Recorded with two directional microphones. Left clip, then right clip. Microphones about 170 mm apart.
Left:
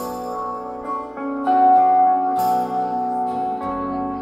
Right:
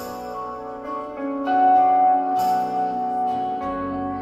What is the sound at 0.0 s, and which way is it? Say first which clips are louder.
Music: left 4 dB; 35° left (ahead or behind).